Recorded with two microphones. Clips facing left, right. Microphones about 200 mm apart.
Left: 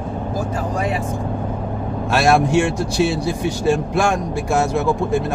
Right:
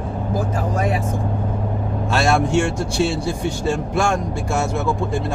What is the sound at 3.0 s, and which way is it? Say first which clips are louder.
Speech: left 2 dB; 25° right (ahead or behind).